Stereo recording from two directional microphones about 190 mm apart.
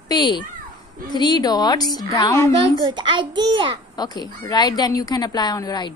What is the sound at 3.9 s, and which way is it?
A woman's voice, 20° left (ahead or behind).